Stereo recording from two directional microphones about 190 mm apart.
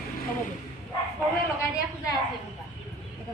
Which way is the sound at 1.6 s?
20° left (ahead or behind).